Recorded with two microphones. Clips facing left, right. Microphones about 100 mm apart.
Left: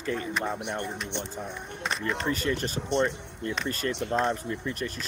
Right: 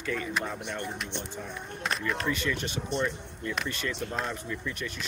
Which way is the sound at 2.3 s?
40° left (ahead or behind).